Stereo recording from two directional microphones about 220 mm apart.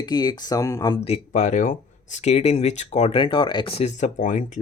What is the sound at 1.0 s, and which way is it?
Speech, 30° left (ahead or behind).